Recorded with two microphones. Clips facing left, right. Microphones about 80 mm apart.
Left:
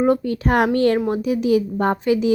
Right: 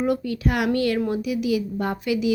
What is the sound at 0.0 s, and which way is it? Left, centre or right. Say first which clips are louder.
Speech: left 5 dB; left.